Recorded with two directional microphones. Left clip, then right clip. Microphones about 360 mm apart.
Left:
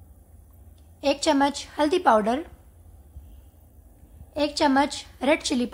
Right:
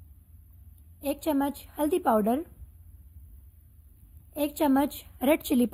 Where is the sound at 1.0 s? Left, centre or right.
Centre.